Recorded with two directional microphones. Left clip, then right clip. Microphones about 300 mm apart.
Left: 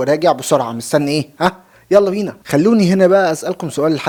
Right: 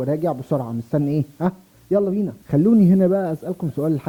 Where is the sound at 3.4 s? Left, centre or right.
Centre.